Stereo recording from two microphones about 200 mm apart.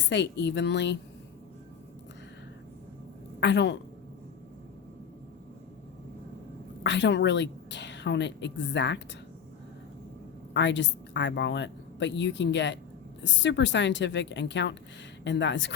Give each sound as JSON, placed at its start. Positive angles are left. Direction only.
{"t": 0.1, "sound": "a woman's voice", "side_deg": 60}
{"t": 3.4, "sound": "a woman's voice", "side_deg": 60}
{"t": 6.8, "sound": "a woman's voice", "side_deg": 65}
{"t": 10.5, "sound": "a woman's voice", "side_deg": 65}